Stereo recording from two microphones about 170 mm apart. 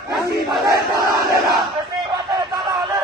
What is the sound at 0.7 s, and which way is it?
Battle cry, 20° right (ahead or behind).